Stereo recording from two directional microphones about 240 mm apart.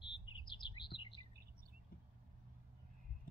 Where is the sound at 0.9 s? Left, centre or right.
Centre.